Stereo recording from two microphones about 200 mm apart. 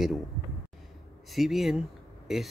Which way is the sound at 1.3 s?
Centre (ahead or behind).